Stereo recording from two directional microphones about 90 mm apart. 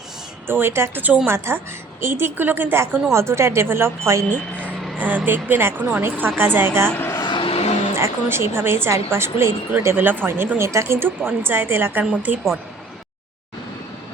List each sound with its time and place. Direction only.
0.4 s a woman's voice: 25° right (ahead or behind)
4.9 s a woman's voice: 20° right (ahead or behind)
6.9 s a sound: 25° left (ahead or behind)
7.3 s vehicle: 75° left (ahead or behind)
7.9 s a woman's voice: 30° right (ahead or behind)